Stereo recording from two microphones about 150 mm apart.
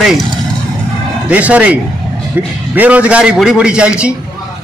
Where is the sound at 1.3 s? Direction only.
10° right (ahead or behind).